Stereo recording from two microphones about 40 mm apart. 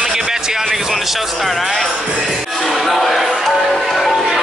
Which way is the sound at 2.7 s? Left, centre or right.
Centre.